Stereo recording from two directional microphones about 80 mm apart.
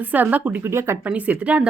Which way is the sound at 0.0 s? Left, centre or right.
Right.